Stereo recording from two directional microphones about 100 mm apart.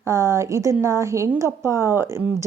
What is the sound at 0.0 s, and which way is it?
A woman's voice, 30° right (ahead or behind).